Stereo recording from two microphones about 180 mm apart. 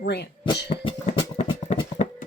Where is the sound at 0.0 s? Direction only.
70° left (ahead or behind).